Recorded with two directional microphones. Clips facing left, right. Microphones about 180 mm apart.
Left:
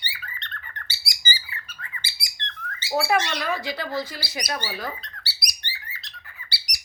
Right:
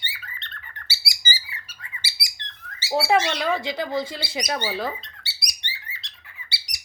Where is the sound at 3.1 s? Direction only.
25° right (ahead or behind).